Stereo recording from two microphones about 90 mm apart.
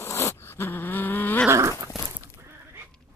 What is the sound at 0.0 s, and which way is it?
Zipper, 30° left (ahead or behind).